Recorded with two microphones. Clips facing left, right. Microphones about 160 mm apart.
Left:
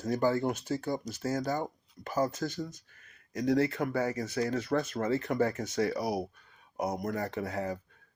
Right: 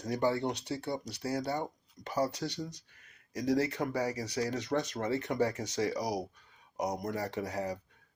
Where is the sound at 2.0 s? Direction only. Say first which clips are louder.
Left 2 dB; 30° left (ahead or behind).